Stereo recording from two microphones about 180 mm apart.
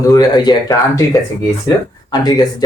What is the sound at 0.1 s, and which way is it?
Speech, 20° left (ahead or behind).